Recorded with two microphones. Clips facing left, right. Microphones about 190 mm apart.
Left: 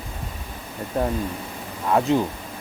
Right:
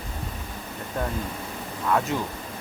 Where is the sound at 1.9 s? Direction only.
25° left (ahead or behind).